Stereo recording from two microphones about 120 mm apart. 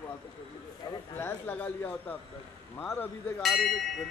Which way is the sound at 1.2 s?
15° left (ahead or behind).